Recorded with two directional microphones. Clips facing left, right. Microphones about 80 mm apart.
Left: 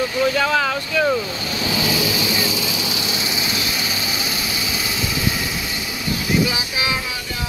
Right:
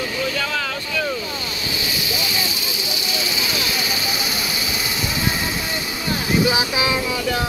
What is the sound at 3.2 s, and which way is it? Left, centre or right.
Vehicle, left.